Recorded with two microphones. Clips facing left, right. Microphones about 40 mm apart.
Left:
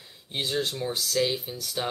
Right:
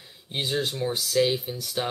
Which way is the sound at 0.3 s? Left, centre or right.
Centre.